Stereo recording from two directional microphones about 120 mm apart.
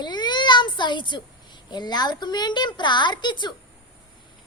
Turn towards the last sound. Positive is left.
turn(degrees=40)  # may be behind; listen again after turning